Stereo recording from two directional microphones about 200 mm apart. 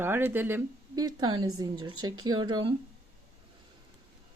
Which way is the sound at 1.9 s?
90° right.